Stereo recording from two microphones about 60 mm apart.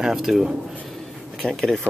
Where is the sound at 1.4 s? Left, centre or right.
Centre.